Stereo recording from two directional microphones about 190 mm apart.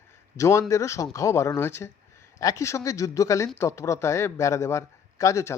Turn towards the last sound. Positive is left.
turn(degrees=15)  # may be behind; listen again after turning